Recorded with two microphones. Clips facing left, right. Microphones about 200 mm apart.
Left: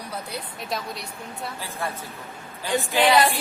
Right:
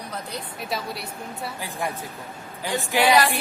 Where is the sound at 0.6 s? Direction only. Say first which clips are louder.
Right 2 dB; 5° right (ahead or behind).